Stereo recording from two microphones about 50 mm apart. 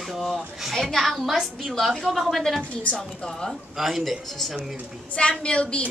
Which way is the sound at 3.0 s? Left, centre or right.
Centre.